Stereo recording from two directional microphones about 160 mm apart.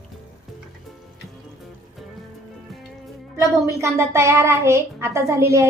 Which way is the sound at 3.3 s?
20° right (ahead or behind).